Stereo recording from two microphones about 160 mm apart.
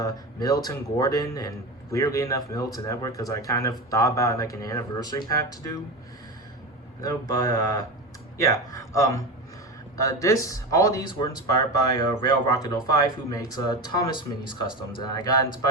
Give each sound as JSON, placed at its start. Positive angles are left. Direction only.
{"t": 0.0, "sound": "a man's voice", "side_deg": 25}
{"t": 7.0, "sound": "a man's voice", "side_deg": 20}